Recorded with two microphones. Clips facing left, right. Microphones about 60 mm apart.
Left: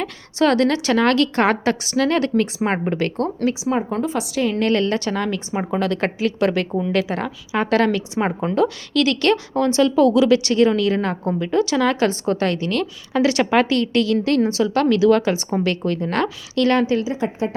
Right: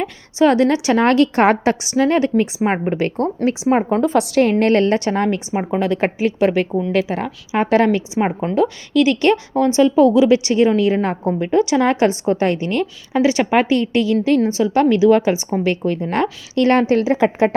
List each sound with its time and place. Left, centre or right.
0.0 s a woman's voice: centre
3.7 s a woman's voice: right
4.6 s a woman's voice: right
5.5 s a woman's voice: centre
11.5 s a woman's voice: centre
14.6 s a woman's voice: centre; by 17.1 s right
17.1 s speech: right